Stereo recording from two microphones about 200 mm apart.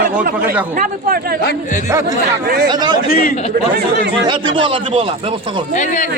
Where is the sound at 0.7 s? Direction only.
45° right (ahead or behind).